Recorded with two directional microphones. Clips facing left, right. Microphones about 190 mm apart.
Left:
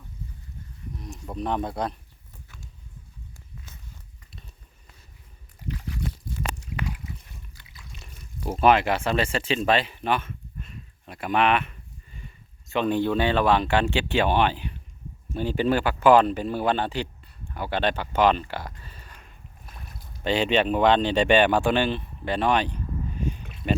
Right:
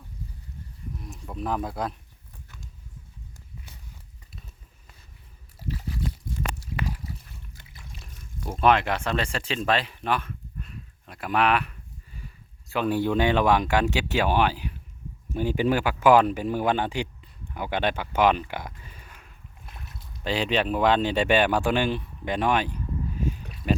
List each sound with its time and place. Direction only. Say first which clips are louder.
1.4 s a man's voice: left 1 dB; centre (ahead or behind)
7.5 s water: right 2 dB; 50° right (ahead or behind)
7.9 s water: left 1 dB; centre (ahead or behind)
8.4 s speech: left 2 dB; 5° left (ahead or behind)
23.1 s a sound: right 1 dB; 5° right (ahead or behind)
23.6 s a man's voice: even; centre (ahead or behind)